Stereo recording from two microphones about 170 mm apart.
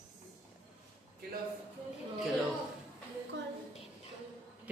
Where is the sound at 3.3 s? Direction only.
90° right.